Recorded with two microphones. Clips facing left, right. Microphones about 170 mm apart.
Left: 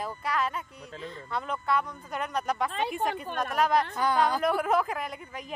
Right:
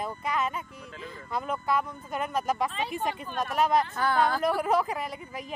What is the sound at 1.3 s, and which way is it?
Speech, 5° right (ahead or behind).